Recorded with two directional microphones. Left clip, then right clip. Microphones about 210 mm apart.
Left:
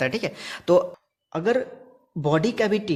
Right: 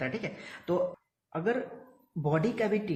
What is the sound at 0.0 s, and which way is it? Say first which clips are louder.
A man's voice: left 9 dB; 45° left (ahead or behind).